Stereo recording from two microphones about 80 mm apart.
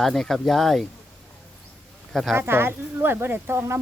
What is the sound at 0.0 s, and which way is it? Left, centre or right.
Speech, centre.